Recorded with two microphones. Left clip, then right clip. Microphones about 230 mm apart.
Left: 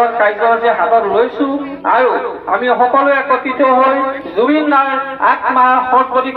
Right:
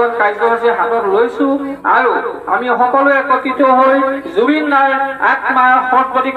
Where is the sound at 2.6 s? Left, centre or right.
Right.